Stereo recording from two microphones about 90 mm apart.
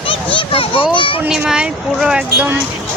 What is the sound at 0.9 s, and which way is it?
Speech, 70° left (ahead or behind).